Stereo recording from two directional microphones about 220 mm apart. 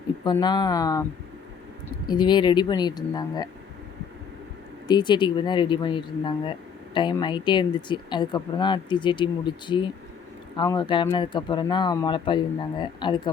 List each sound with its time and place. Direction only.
0.3 s speech: 20° left (ahead or behind)
2.0 s speech: 20° left (ahead or behind)
4.9 s speech: 20° left (ahead or behind)